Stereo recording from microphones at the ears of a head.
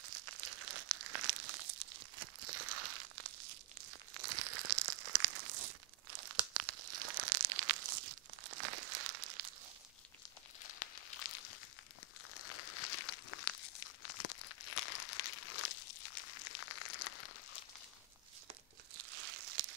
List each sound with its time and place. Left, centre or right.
0.0 s crumpling: right
10.6 s a sound: left
12.4 s crumpling: left
18.9 s crumpling: right